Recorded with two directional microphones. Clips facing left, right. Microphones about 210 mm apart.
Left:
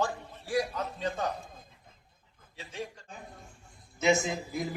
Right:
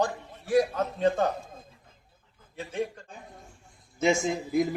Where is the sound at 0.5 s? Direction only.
50° right (ahead or behind).